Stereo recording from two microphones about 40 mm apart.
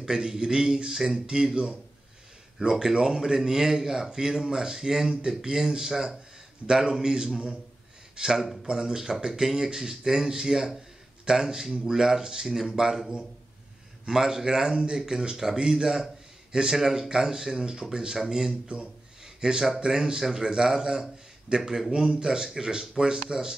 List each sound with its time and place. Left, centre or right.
0.0 s speech: centre
14.0 s speech: centre
17.1 s speech: centre
19.2 s a sound: centre
19.8 s speech: centre